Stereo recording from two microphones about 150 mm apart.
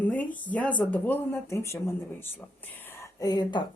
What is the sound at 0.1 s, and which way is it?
Speech, 10° left (ahead or behind).